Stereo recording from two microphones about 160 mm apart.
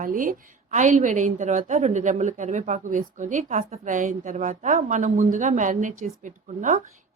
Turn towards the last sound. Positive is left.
turn(degrees=-50)  # may be behind; listen again after turning